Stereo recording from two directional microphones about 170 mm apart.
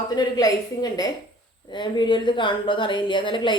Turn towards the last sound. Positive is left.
turn(degrees=30)  # may be behind; listen again after turning